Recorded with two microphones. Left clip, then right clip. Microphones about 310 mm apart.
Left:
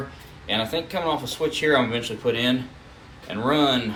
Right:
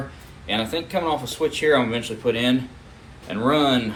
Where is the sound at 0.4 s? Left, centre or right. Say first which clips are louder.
Even; centre.